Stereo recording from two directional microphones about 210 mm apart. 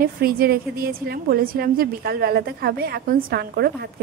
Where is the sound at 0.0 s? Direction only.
45° right (ahead or behind).